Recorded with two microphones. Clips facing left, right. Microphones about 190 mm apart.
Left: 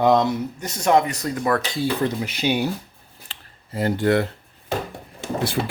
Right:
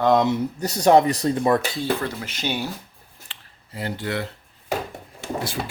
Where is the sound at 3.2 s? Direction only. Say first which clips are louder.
Left 7 dB; 45° left (ahead or behind).